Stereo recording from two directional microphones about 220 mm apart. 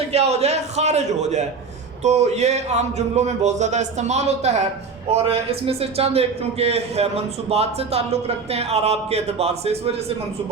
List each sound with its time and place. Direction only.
0.1 s a man's voice: 30° right (ahead or behind)